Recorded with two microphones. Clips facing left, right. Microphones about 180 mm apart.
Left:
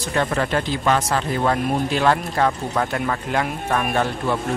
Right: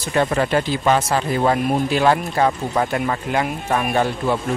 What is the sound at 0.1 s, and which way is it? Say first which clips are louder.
Speech: right 3 dB; 10° right (ahead or behind).